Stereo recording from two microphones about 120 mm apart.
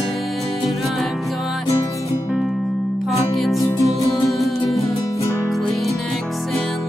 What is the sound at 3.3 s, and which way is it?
Music, centre (ahead or behind).